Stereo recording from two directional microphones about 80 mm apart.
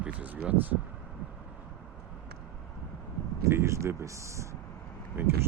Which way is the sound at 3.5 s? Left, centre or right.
Right.